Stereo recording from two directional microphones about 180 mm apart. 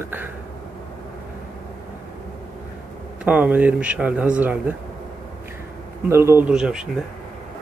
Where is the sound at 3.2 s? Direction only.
10° right (ahead or behind).